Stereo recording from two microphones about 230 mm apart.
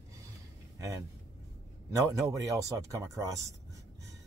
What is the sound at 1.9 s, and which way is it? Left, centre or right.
Speech, centre.